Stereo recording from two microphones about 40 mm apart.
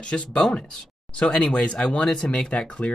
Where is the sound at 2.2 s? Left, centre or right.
Left.